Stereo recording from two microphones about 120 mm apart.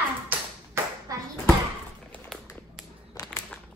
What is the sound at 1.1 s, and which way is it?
Bouncing, 30° right (ahead or behind).